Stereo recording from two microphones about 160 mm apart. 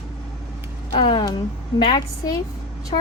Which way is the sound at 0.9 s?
35° left (ahead or behind).